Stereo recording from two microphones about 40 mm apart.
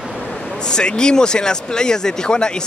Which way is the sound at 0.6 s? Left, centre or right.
Centre.